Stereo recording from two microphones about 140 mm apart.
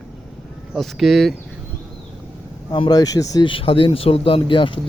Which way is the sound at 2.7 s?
30° left (ahead or behind).